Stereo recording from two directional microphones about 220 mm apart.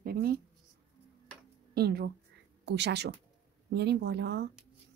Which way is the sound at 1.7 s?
45° right (ahead or behind).